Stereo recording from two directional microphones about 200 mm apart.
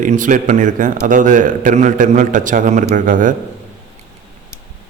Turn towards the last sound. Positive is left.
turn(degrees=-40)  # may be behind; listen again after turning